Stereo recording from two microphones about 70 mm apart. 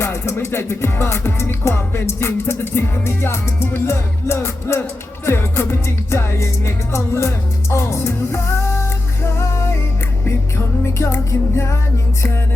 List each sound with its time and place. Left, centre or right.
0.0 s music: left